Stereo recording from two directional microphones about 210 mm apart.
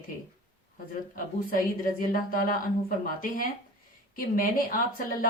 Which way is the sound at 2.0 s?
40° left (ahead or behind).